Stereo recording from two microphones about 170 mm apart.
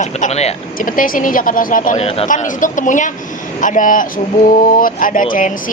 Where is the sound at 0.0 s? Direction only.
40° left (ahead or behind).